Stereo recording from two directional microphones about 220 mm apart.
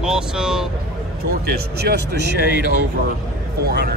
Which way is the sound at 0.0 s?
5° right (ahead or behind).